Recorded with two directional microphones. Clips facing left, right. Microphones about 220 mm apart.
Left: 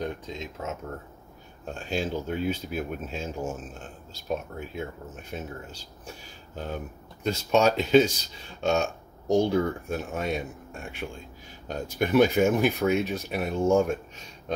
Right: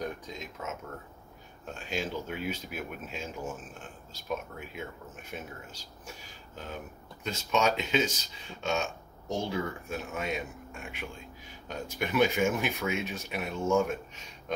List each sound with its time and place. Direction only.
0.0 s speech: 25° left (ahead or behind)
1.9 s speech: 35° left (ahead or behind)
7.2 s speech: 35° left (ahead or behind)
9.3 s speech: 40° left (ahead or behind)